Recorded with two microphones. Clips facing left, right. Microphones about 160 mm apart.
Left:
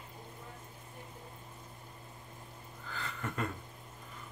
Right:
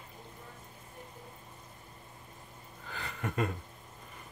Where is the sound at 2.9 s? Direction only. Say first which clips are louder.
Right 2 dB; 15° right (ahead or behind).